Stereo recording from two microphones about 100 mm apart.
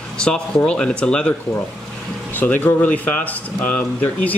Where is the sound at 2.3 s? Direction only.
15° left (ahead or behind).